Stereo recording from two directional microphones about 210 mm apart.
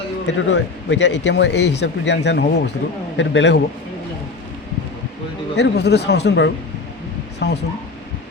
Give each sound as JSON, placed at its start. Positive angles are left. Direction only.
{"t": 0.3, "sound": "a man's voice", "side_deg": 55}
{"t": 5.5, "sound": "speech", "side_deg": 55}